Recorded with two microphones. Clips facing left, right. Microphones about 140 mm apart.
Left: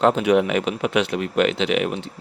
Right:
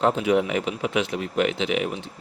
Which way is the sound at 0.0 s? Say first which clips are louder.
Left 4 dB; 70° left (ahead or behind).